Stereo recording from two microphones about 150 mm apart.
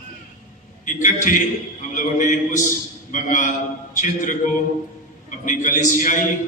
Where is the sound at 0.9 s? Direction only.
60° left (ahead or behind).